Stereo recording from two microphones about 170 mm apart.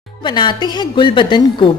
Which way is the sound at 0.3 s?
25° left (ahead or behind).